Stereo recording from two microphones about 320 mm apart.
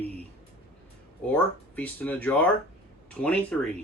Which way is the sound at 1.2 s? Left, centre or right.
Centre.